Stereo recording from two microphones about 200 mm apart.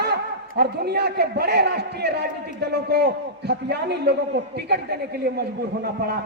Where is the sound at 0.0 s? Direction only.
55° right (ahead or behind).